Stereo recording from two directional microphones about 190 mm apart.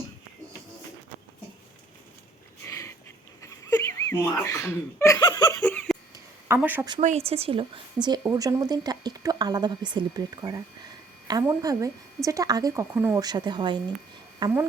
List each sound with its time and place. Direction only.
2.6 s a sound: 15° left (ahead or behind)
5.2 s laughter: 20° left (ahead or behind)
5.5 s a sound: 5° left (ahead or behind)
6.5 s a woman's voice: 10° right (ahead or behind)
7.0 s speech: 35° right (ahead or behind)
8.2 s a woman's voice: 20° right (ahead or behind)